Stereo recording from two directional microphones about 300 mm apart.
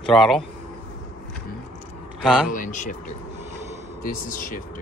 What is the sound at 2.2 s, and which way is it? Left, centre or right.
Speech, centre.